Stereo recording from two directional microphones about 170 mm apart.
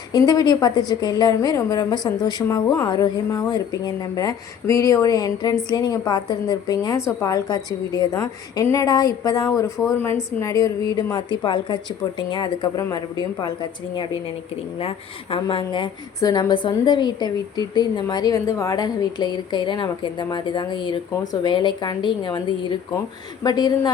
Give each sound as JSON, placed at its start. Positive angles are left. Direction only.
{"t": 0.1, "sound": "a woman's voice", "side_deg": 25}